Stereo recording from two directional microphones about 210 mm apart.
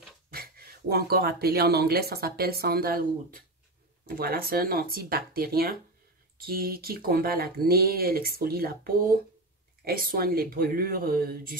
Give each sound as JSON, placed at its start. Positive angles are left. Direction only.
{"t": 0.3, "sound": "speech", "side_deg": -45}